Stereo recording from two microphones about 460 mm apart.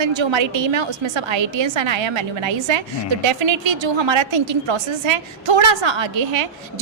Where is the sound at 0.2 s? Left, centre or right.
Right.